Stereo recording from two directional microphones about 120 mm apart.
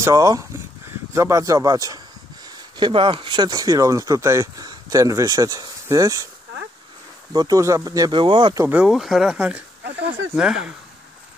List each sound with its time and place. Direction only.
0.0 s speech: 30° right (ahead or behind)
2.8 s speech: 45° right (ahead or behind); by 6.2 s 30° right (ahead or behind)
7.3 s speech: 30° right (ahead or behind)
8.2 s speech: 45° right (ahead or behind)
8.7 s speech: 5° right (ahead or behind)